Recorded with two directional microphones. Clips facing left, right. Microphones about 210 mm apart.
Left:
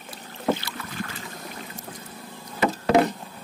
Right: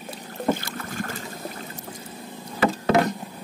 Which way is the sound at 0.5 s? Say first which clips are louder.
Right 2 dB; 50° right (ahead or behind).